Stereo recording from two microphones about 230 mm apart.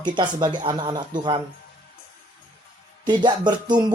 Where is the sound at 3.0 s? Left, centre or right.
Centre.